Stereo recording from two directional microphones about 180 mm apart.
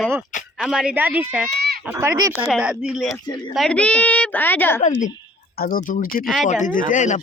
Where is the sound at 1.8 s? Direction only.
15° right (ahead or behind).